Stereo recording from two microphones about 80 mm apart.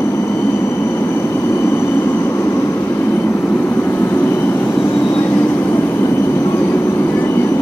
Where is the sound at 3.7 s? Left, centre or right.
Left.